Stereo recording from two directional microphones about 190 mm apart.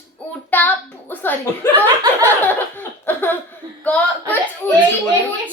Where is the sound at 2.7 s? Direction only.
10° left (ahead or behind).